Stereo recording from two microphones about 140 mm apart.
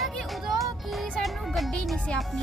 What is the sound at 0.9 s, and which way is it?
Speech, centre (ahead or behind).